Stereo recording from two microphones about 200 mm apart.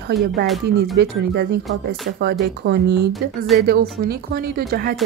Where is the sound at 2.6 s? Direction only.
60° right (ahead or behind).